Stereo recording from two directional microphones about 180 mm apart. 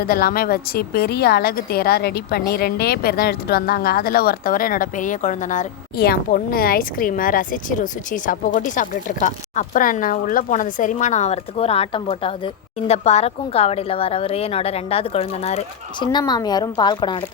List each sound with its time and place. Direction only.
0.0 s speech: 55° left (ahead or behind)
6.0 s a woman's voice: 55° left (ahead or behind); by 16.0 s 35° left (ahead or behind)
16.1 s speech: 25° left (ahead or behind)